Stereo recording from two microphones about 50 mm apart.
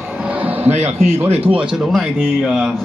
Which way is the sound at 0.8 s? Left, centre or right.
Right.